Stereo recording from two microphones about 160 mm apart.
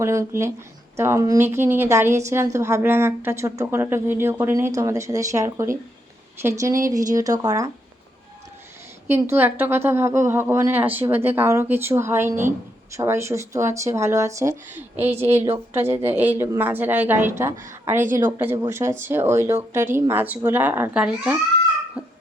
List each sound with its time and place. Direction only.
0.0 s a woman's voice: 20° right (ahead or behind)
9.0 s a woman's voice: 15° right (ahead or behind)
22.0 s a sound: 5° right (ahead or behind)